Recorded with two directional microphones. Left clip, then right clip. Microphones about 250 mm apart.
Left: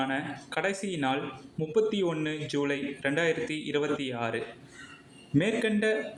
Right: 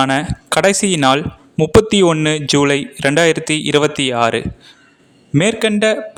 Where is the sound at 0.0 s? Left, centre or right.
Right.